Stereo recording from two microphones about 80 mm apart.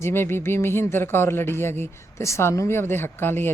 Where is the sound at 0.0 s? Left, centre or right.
Left.